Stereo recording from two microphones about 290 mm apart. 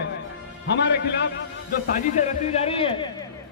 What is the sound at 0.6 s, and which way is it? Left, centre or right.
Speech, left.